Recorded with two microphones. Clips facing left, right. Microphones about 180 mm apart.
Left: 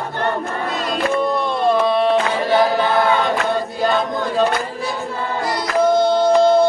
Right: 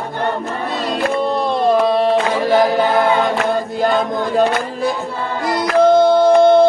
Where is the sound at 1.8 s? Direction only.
40° right (ahead or behind).